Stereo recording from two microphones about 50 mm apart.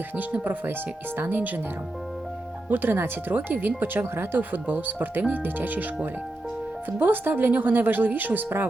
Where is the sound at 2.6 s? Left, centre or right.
Right.